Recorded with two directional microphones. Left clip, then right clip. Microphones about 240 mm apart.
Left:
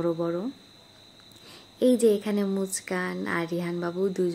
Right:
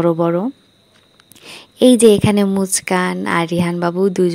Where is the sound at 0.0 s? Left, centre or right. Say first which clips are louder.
Right 12 dB; right.